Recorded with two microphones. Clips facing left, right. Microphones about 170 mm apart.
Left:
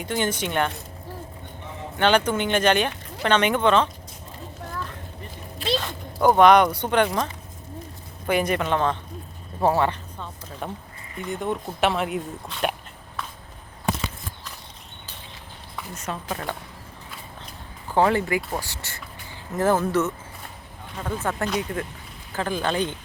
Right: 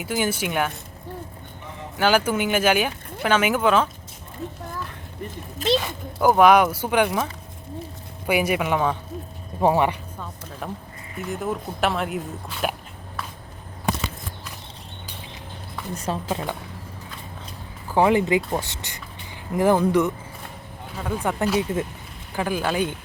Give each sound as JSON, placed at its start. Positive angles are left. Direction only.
{"t": 0.0, "sound": "speech", "side_deg": -5}
{"t": 2.0, "sound": "speech", "side_deg": -5}
{"t": 5.6, "sound": "speech", "side_deg": -45}
{"t": 6.1, "sound": "speech", "side_deg": -5}
{"t": 8.3, "sound": "speech", "side_deg": -10}
{"t": 10.6, "sound": "speech", "side_deg": 0}
{"t": 16.0, "sound": "speech", "side_deg": -30}
{"t": 17.9, "sound": "speech", "side_deg": -15}
{"t": 20.9, "sound": "speech", "side_deg": -5}
{"t": 21.2, "sound": "speech", "side_deg": -15}